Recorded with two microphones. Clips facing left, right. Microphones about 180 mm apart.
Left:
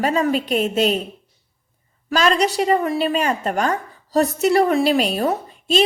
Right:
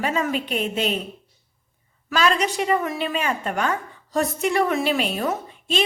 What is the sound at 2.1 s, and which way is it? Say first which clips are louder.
A woman's voice: left 3 dB; 40° left (ahead or behind).